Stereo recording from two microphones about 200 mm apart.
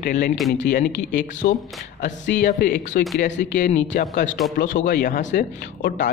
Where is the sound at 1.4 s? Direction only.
50° left (ahead or behind).